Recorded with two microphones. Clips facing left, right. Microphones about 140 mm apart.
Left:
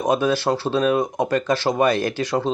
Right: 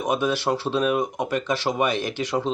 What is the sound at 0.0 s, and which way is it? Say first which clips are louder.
Speech: left 4 dB; 35° left (ahead or behind).